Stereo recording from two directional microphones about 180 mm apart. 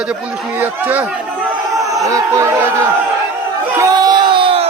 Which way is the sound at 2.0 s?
15° right (ahead or behind).